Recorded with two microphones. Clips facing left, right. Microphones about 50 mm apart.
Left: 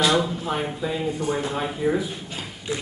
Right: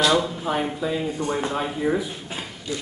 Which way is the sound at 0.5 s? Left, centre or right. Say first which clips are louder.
Right 2 dB; centre.